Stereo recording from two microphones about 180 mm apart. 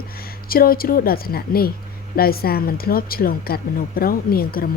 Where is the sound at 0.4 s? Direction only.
55° left (ahead or behind).